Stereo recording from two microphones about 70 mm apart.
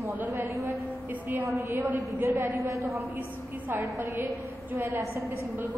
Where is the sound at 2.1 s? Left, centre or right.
Right.